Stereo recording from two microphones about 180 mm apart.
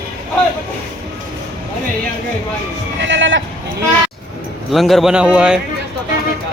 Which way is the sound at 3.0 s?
90° right.